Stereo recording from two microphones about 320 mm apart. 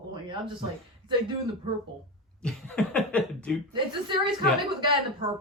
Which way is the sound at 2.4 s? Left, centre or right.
Centre.